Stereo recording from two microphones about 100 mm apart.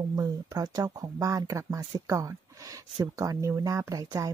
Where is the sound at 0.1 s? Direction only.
35° right (ahead or behind).